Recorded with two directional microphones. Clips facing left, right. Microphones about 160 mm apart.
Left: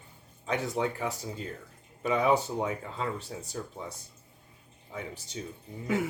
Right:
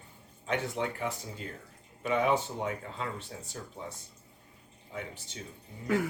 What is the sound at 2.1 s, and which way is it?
Speech, 35° left (ahead or behind).